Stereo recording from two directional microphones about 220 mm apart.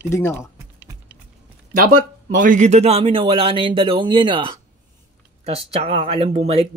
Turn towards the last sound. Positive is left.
turn(degrees=-25)  # may be behind; listen again after turning